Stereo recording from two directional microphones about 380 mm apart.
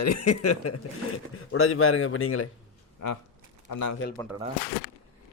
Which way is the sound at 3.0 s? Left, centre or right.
Left.